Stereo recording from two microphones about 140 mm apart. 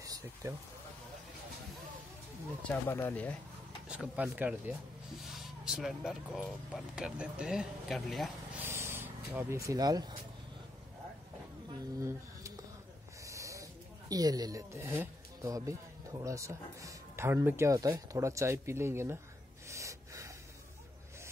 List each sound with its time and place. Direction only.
0.0 s a sound: 20° right (ahead or behind)
2.7 s speech: 15° left (ahead or behind)
3.9 s speech: 10° right (ahead or behind)
8.5 s a sound: 15° right (ahead or behind)
13.2 s speech: 20° right (ahead or behind)
19.7 s gasp: 20° right (ahead or behind)